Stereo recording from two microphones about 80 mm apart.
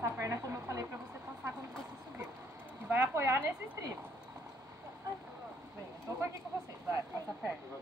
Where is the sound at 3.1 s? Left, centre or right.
Right.